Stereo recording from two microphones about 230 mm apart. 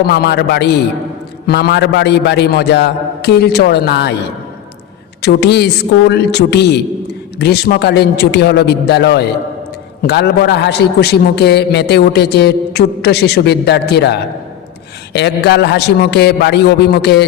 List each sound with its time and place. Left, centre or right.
0.1 s a man's voice: left
5.2 s a man's voice: left